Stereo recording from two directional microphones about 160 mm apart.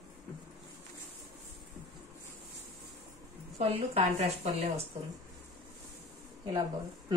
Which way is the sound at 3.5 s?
40° right (ahead or behind).